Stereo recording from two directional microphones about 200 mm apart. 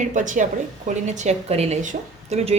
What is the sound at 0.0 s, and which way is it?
Speech, 40° right (ahead or behind).